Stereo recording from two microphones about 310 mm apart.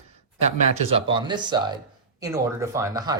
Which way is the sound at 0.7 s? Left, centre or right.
Centre.